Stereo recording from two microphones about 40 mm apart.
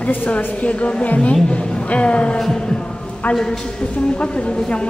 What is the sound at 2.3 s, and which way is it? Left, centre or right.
Heart sounds, centre.